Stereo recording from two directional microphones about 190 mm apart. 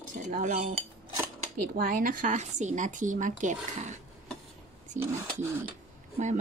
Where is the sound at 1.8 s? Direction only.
45° right (ahead or behind).